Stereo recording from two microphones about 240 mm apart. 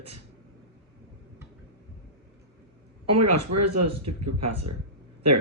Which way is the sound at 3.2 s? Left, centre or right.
Right.